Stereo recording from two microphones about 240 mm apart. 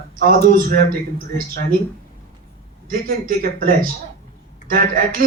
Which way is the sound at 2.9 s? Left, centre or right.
Right.